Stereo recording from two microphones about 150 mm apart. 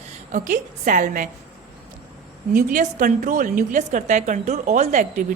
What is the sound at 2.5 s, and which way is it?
A woman's voice, 65° right (ahead or behind).